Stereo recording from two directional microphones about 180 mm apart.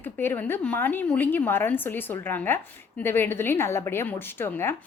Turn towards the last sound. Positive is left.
turn(degrees=10)  # may be behind; listen again after turning